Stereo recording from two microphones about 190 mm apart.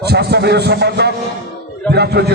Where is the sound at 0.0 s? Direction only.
60° right (ahead or behind).